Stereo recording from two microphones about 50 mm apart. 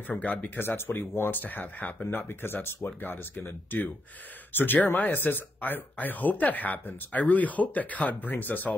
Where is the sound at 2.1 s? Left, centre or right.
Left.